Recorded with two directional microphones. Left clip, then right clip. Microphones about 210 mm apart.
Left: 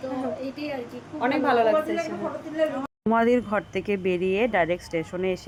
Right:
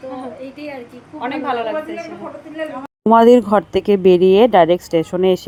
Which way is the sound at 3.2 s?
35° right (ahead or behind).